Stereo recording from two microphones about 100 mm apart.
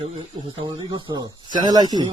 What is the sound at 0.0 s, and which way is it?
Speech, 90° right.